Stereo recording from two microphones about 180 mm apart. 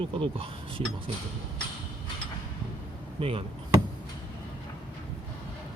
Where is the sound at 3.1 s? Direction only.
30° right (ahead or behind).